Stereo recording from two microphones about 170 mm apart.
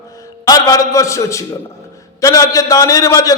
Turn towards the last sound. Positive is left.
turn(degrees=20)  # may be behind; listen again after turning